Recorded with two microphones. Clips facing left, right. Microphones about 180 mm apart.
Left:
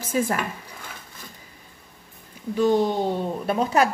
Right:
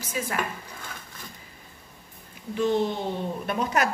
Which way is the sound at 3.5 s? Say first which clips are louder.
Left 5 dB; 30° left (ahead or behind).